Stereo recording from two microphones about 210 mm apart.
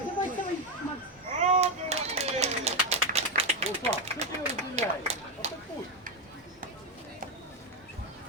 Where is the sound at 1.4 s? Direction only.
30° right (ahead or behind).